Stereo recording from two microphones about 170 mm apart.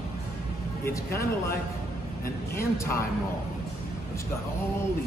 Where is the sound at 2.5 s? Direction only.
15° left (ahead or behind).